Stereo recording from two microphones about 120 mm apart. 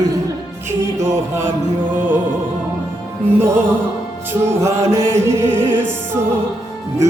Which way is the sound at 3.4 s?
20° right (ahead or behind).